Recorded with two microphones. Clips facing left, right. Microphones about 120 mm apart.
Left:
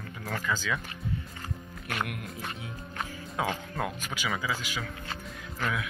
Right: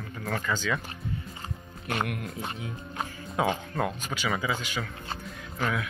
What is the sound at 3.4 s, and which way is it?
Speech, 5° right (ahead or behind).